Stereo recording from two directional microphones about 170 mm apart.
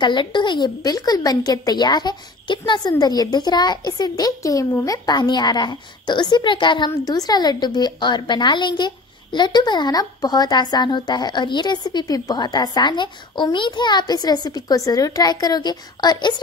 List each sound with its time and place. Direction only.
0.0 s a woman's voice: 25° left (ahead or behind)